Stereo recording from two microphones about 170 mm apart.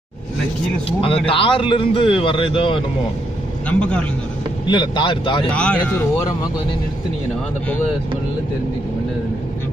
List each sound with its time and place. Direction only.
0.8 s a man's voice: 35° left (ahead or behind)
3.6 s speech: 5° left (ahead or behind)
4.6 s speech: 25° left (ahead or behind)
5.5 s speech: 5° left (ahead or behind)